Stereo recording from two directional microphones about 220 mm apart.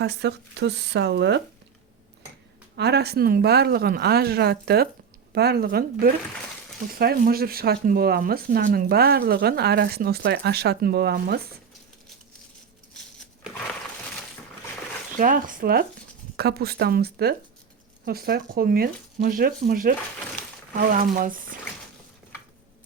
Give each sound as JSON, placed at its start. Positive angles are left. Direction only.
{"t": 0.0, "sound": "speech", "side_deg": -50}
{"t": 2.7, "sound": "speech", "side_deg": -50}
{"t": 12.9, "sound": "a sound", "side_deg": 5}
{"t": 15.2, "sound": "speech", "side_deg": -40}